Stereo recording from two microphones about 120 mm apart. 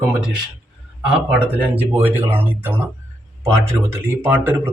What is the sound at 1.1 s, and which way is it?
Speech, 10° right (ahead or behind).